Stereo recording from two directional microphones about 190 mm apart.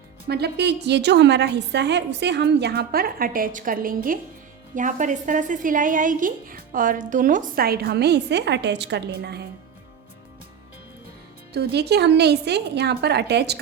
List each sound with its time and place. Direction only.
0.3 s a woman's voice: 60° right (ahead or behind)
11.5 s a woman's voice: 60° right (ahead or behind)